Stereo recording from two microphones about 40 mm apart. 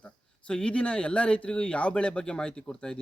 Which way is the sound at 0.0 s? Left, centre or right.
Left.